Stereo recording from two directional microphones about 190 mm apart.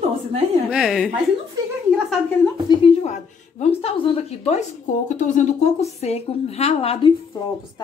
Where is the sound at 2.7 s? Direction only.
30° left (ahead or behind).